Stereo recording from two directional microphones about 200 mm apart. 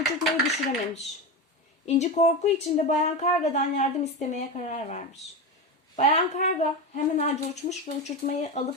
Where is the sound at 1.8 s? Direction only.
35° left (ahead or behind).